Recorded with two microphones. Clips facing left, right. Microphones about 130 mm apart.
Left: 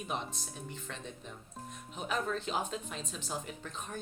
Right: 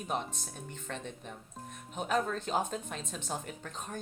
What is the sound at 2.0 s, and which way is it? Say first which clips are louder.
Speech: right 3 dB; 45° right (ahead or behind).